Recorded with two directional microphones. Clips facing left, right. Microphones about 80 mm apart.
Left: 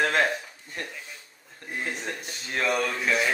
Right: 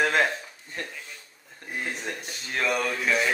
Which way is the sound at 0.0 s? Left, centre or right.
Centre.